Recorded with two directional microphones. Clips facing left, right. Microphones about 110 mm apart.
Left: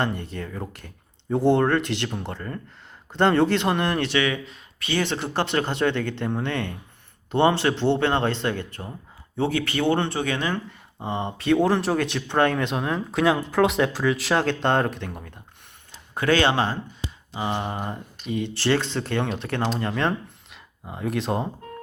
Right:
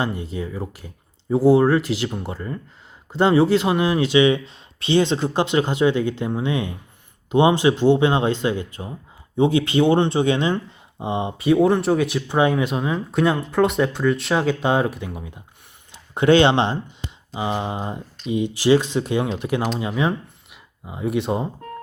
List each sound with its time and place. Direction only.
0.3 s speech: 10° right (ahead or behind)
16.1 s speech: 25° right (ahead or behind); by 21.5 s centre (ahead or behind)